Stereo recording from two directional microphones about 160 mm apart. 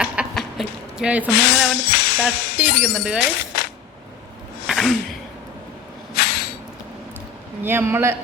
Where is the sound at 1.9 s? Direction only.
80° left.